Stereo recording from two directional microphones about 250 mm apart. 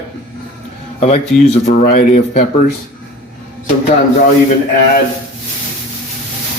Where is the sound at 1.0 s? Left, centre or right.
Left.